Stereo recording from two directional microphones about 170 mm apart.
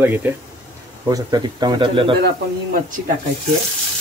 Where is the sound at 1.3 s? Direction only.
25° right (ahead or behind).